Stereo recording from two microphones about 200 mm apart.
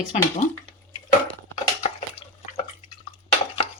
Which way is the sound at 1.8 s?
30° left (ahead or behind).